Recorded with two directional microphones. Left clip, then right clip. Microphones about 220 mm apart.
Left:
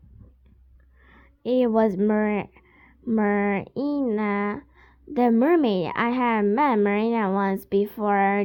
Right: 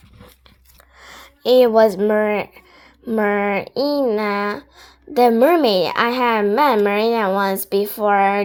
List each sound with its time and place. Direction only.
1.0 s a woman's voice: 30° left (ahead or behind)